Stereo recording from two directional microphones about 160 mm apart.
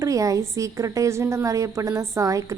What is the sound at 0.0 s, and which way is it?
A woman's voice, 20° right (ahead or behind).